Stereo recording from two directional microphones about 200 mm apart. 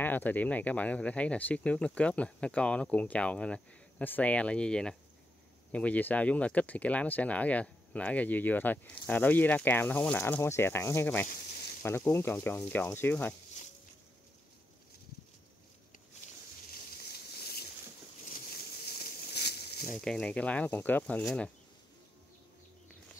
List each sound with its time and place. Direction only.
0.0 s speech: 10° left (ahead or behind)
17.1 s boat: 50° left (ahead or behind)
19.3 s a sound: 55° left (ahead or behind)
20.0 s speech: 5° left (ahead or behind)